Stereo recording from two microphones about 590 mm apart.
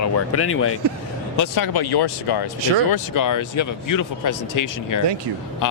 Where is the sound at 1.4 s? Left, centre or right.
Left.